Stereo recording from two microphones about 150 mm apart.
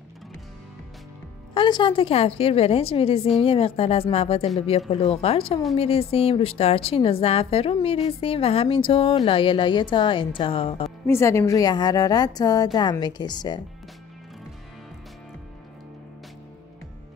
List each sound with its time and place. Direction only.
1.5 s a woman's voice: 30° left (ahead or behind)
11.1 s a woman's voice: 20° left (ahead or behind)